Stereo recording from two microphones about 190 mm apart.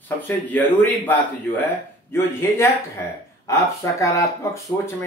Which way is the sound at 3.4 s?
15° left (ahead or behind).